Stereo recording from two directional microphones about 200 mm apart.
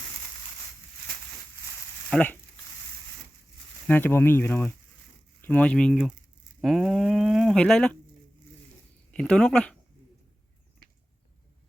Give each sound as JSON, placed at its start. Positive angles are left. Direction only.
{"t": 2.0, "sound": "speech", "side_deg": 5}
{"t": 3.8, "sound": "speech", "side_deg": 10}
{"t": 9.1, "sound": "speech", "side_deg": 5}